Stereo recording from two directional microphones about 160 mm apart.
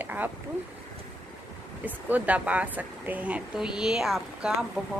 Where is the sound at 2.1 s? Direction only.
10° right (ahead or behind).